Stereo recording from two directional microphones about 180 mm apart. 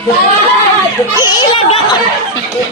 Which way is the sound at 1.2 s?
25° left (ahead or behind).